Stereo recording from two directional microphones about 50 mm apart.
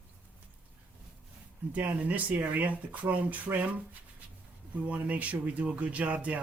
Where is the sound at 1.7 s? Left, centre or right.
Right.